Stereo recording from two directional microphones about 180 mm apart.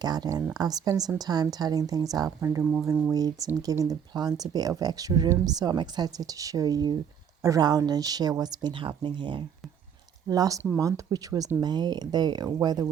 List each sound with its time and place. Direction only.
0.0 s speech: 20° right (ahead or behind)